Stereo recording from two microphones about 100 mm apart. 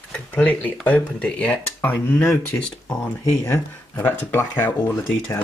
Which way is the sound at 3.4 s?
20° left (ahead or behind).